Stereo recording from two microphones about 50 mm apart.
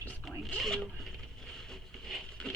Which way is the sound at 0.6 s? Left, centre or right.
Centre.